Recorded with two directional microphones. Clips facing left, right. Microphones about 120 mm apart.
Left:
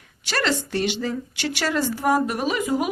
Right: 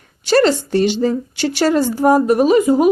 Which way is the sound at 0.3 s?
35° right (ahead or behind).